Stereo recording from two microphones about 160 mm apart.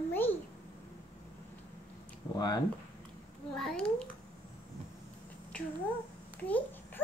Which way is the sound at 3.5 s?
5° left (ahead or behind).